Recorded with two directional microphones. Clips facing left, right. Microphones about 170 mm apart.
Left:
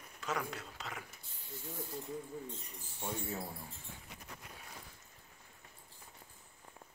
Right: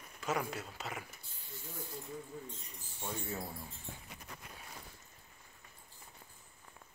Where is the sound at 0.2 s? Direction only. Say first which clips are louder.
Right 3 dB; 10° right (ahead or behind).